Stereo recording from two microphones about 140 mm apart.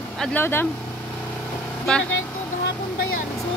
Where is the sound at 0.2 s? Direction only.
15° left (ahead or behind).